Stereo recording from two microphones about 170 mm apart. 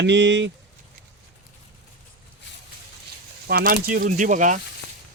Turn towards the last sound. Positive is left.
turn(degrees=-50)  # may be behind; listen again after turning